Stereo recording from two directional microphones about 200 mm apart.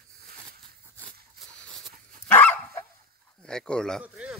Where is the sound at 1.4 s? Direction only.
Centre (ahead or behind).